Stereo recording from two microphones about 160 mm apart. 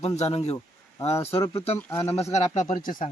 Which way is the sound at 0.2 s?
40° left (ahead or behind).